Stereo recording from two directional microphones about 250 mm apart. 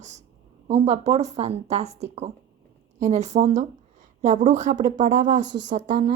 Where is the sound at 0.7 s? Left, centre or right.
Right.